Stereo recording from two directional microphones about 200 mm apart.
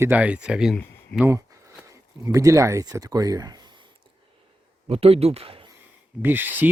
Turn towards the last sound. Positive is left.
turn(degrees=-10)  # may be behind; listen again after turning